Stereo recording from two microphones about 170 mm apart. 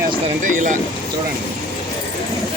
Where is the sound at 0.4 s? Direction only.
50° right (ahead or behind).